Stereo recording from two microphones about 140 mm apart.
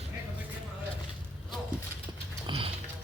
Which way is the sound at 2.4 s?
40° right (ahead or behind).